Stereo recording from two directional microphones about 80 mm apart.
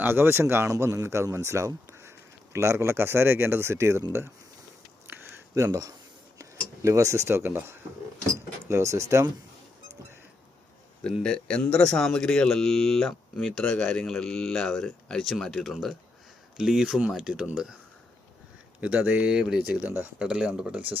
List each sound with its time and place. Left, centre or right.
0.0 s speech: right
5.5 s speech: right
11.0 s speech: centre
16.8 s speech: centre
18.8 s speech: centre
19.8 s speech: right